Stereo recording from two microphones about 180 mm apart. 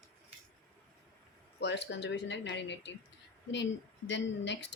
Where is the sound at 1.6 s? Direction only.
70° left (ahead or behind).